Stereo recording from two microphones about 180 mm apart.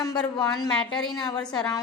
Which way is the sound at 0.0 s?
20° left (ahead or behind).